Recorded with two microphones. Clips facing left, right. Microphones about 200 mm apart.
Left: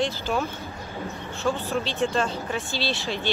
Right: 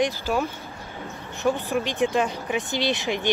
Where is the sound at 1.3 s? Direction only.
15° right (ahead or behind).